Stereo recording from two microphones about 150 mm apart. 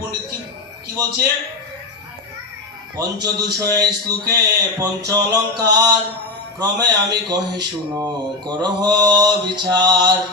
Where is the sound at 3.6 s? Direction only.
25° right (ahead or behind).